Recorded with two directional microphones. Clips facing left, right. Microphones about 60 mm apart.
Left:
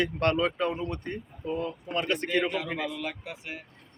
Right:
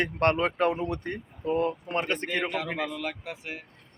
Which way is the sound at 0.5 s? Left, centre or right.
Right.